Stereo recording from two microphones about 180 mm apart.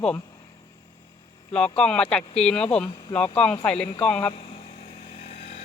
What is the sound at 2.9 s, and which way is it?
Speech, 25° left (ahead or behind).